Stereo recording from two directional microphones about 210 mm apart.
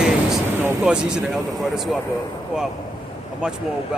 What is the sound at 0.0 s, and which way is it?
Vehicle, 5° right (ahead or behind).